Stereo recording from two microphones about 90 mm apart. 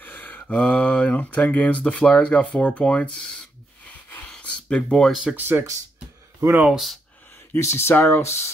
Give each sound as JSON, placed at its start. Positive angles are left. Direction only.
{"t": 0.0, "sound": "mantra", "side_deg": 20}
{"t": 0.4, "sound": "speech", "side_deg": 10}
{"t": 4.3, "sound": "a sound", "side_deg": 15}
{"t": 5.3, "sound": "speech", "side_deg": -25}
{"t": 6.7, "sound": "speech", "side_deg": 0}
{"t": 7.5, "sound": "speech", "side_deg": 30}